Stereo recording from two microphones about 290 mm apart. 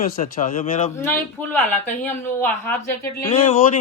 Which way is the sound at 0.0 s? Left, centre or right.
Left.